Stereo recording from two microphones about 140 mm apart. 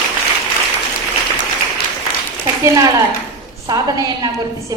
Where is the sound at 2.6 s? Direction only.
25° right (ahead or behind).